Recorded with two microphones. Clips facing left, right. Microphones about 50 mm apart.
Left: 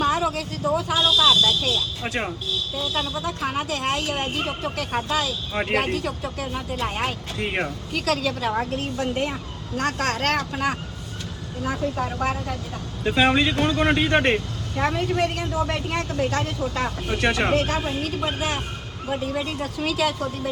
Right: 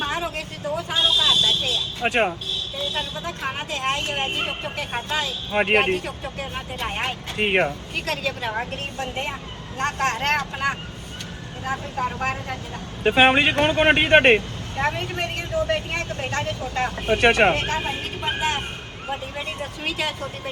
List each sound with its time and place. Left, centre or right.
0.0 s vehicle: right
0.9 s a sound: right
2.9 s speech: right
7.3 s speech: right
7.9 s speech: right
13.0 s speech: right